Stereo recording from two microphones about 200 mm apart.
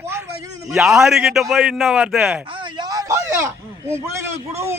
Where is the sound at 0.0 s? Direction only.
15° right (ahead or behind).